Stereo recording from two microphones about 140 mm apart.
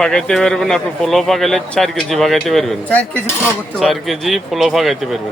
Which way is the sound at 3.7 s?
Centre (ahead or behind).